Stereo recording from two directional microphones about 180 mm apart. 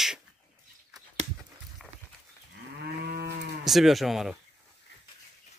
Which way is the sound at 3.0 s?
65° right (ahead or behind).